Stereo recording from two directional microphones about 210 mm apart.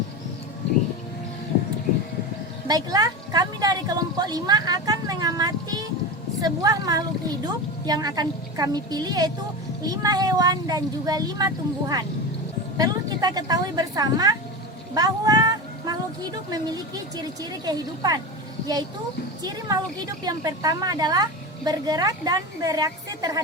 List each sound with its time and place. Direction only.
2.6 s a woman's voice: 15° right (ahead or behind)
19.4 s a woman's voice: 20° right (ahead or behind)